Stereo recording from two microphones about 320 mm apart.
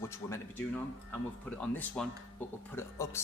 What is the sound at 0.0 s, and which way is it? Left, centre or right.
A man's voice, centre.